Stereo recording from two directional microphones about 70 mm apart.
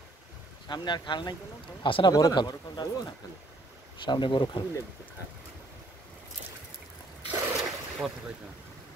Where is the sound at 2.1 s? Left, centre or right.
Left.